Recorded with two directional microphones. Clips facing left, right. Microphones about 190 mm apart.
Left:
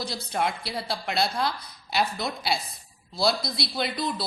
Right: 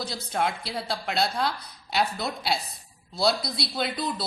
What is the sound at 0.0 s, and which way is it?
Speech, centre (ahead or behind).